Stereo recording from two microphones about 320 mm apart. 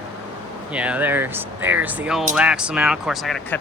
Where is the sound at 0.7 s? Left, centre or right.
Centre.